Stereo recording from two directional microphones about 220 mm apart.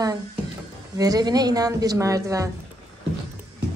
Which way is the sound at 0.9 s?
15° right (ahead or behind).